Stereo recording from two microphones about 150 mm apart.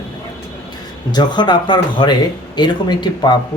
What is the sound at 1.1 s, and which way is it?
Speech, 30° left (ahead or behind).